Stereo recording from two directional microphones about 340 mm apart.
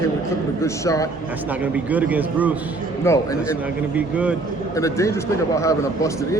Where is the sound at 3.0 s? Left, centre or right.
Centre.